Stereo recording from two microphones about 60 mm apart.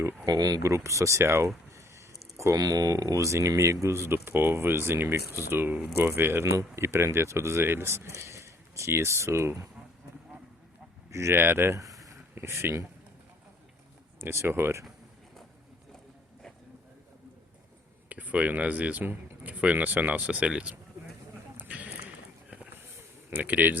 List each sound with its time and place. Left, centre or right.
0.3 s speech: right
0.7 s speech: right
1.7 s a sound: right
2.6 s speech: right
6.4 s speech: right
11.1 s speech: right
11.8 s a sound: right
12.3 s speech: right
14.2 s speech: right
18.1 s speech: right
21.6 s clip-clop: right
23.3 s speech: right